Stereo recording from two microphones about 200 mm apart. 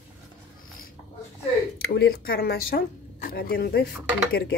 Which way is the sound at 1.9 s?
50° left (ahead or behind).